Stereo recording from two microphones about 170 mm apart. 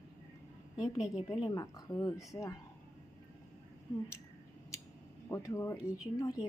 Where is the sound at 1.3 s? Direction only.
25° left (ahead or behind).